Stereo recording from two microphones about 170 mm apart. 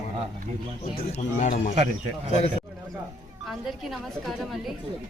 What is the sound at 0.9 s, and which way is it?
Speech, 45° left (ahead or behind).